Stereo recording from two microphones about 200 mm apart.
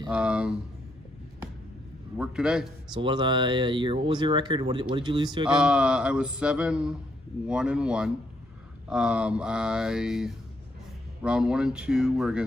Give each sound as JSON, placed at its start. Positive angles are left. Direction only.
{"t": 0.1, "sound": "speech", "side_deg": -5}
{"t": 2.1, "sound": "speech", "side_deg": -5}
{"t": 2.9, "sound": "speech", "side_deg": -20}
{"t": 5.5, "sound": "speech", "side_deg": -5}